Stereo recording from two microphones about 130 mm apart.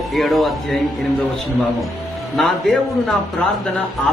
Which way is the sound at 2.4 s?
Centre (ahead or behind).